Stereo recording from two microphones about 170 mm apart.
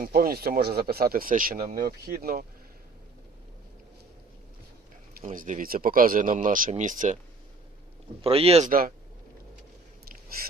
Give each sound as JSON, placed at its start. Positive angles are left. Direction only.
{"t": 0.0, "sound": "speech", "side_deg": -60}
{"t": 5.2, "sound": "speech", "side_deg": -50}
{"t": 8.2, "sound": "speech", "side_deg": -35}